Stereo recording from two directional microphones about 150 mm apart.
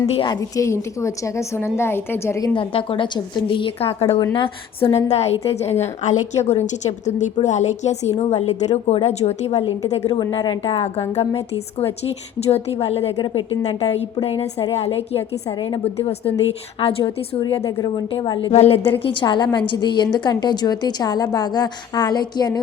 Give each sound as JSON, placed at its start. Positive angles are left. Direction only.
{"t": 0.1, "sound": "a woman's voice", "side_deg": 35}
{"t": 0.3, "sound": "a woman's voice", "side_deg": 20}
{"t": 2.6, "sound": "a woman's voice", "side_deg": 35}
{"t": 10.2, "sound": "a woman's voice", "side_deg": 30}
{"t": 12.0, "sound": "a woman's voice", "side_deg": 45}
{"t": 13.1, "sound": "a woman's voice", "side_deg": 30}
{"t": 14.8, "sound": "a woman's voice", "side_deg": 40}
{"t": 15.5, "sound": "a woman's voice", "side_deg": 30}
{"t": 16.0, "sound": "a woman's voice", "side_deg": 40}
{"t": 17.4, "sound": "a woman's voice", "side_deg": 25}
{"t": 19.2, "sound": "a woman's voice", "side_deg": 30}